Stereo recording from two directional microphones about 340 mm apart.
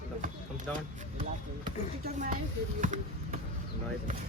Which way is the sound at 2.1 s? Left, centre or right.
Right.